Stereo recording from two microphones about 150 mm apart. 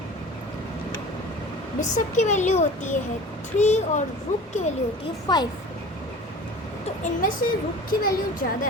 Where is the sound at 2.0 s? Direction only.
55° left (ahead or behind).